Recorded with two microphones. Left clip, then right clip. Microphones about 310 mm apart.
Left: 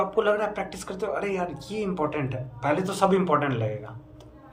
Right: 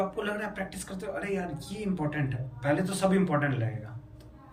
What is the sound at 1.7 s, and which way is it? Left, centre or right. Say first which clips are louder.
Speech: left 8 dB; left.